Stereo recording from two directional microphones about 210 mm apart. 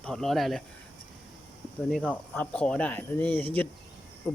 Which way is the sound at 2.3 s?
5° left (ahead or behind).